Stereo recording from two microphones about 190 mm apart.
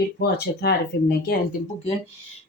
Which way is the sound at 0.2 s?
60° left (ahead or behind).